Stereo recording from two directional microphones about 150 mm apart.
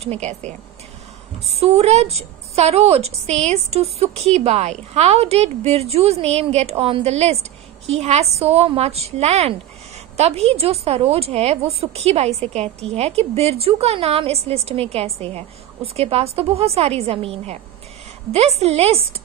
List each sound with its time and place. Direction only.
0.0 s a woman's voice: 50° right (ahead or behind)